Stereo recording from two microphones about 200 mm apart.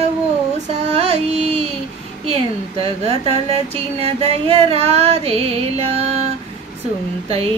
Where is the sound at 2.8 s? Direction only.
30° right (ahead or behind).